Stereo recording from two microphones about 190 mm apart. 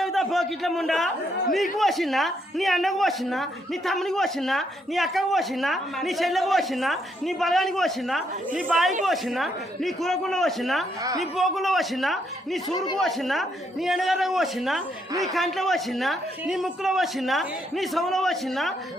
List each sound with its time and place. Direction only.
0.0 s a sound: centre (ahead or behind)
1.8 s speech: centre (ahead or behind)
12.7 s speech: 25° left (ahead or behind)
13.0 s speech: centre (ahead or behind)